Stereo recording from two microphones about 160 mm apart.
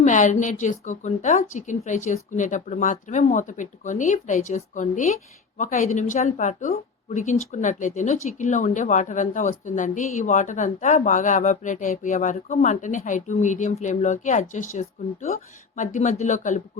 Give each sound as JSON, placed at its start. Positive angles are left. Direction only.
{"t": 0.0, "sound": "a woman's voice", "side_deg": 50}